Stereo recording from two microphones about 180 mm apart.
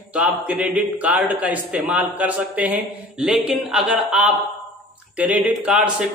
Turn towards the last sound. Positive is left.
turn(degrees=-5)  # may be behind; listen again after turning